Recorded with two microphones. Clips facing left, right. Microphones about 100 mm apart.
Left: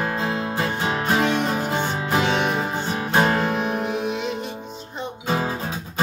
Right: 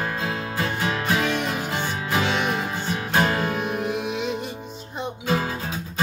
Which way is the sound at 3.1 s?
30° left (ahead or behind).